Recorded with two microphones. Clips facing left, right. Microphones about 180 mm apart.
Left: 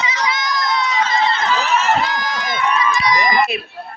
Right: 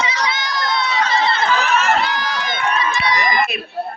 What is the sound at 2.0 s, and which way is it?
Run, 30° right (ahead or behind).